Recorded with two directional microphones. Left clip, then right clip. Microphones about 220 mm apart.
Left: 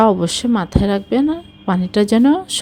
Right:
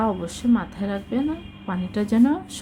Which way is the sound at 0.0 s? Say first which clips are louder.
Left 10 dB; 35° left (ahead or behind).